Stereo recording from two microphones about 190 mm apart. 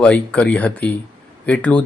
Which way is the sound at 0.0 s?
5° left (ahead or behind).